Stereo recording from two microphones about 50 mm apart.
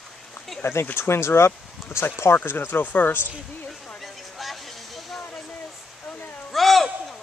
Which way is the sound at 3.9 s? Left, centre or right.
Centre.